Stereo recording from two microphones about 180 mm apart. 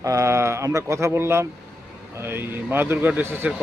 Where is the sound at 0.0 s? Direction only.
20° right (ahead or behind).